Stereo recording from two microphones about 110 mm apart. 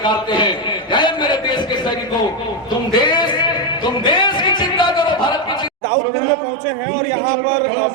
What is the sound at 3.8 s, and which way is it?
Music, 45° left (ahead or behind).